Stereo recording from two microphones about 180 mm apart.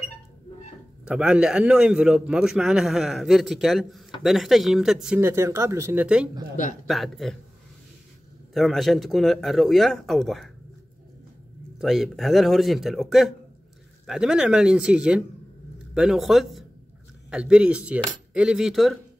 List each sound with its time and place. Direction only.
1.0 s a man's voice: 5° right (ahead or behind)
6.5 s a man's voice: 45° left (ahead or behind)
6.9 s a man's voice: centre (ahead or behind)
8.5 s a man's voice: centre (ahead or behind)
11.8 s a man's voice: centre (ahead or behind)